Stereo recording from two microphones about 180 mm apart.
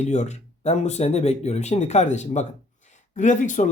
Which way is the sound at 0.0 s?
40° left (ahead or behind).